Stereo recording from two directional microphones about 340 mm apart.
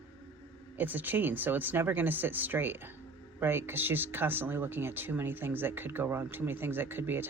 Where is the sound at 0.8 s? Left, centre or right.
Centre.